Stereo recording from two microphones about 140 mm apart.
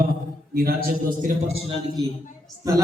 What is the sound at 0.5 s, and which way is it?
Speech, 90° right.